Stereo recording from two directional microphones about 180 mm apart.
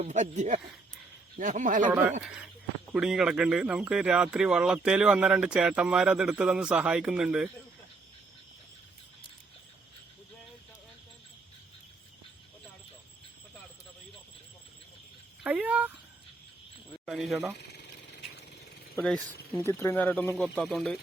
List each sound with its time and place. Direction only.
0.0 s a man's voice: 40° right (ahead or behind)
1.9 s speech: 5° right (ahead or behind)
15.4 s a sound: 10° right (ahead or behind)
17.1 s speech: centre (ahead or behind)
17.6 s a sound: 70° left (ahead or behind)
19.0 s speech: 10° left (ahead or behind)